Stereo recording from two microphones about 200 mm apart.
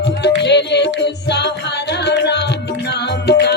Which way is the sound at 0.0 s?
60° left (ahead or behind).